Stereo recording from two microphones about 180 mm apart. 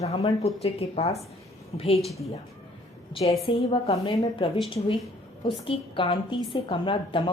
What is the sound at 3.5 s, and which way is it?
Speech, 30° left (ahead or behind).